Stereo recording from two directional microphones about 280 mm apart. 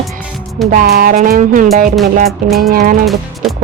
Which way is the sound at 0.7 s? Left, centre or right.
Right.